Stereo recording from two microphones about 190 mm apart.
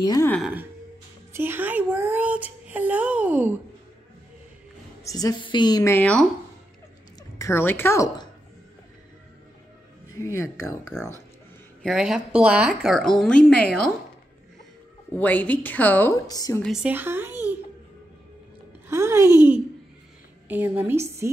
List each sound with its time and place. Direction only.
0.0 s a woman's voice: 20° left (ahead or behind)
0.3 s a woman's voice: 5° right (ahead or behind)
1.3 s music: 10° right (ahead or behind)
5.0 s a woman's voice: 20° left (ahead or behind)
7.3 s speech: 15° left (ahead or behind)
10.4 s a woman's voice: 15° left (ahead or behind)
11.8 s a woman's voice: centre (ahead or behind)
15.1 s a woman's voice: 10° left (ahead or behind)
16.6 s speech: 5° right (ahead or behind)
18.9 s speech: 15° right (ahead or behind)
20.4 s a woman's voice: 10° right (ahead or behind)